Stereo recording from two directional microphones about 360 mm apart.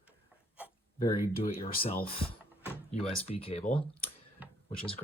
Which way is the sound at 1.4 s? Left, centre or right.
Centre.